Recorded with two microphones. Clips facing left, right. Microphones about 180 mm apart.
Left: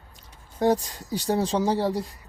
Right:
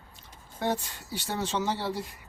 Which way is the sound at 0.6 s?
40° left (ahead or behind).